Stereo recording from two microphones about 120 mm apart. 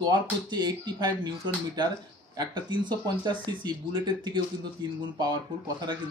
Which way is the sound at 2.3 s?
40° right (ahead or behind).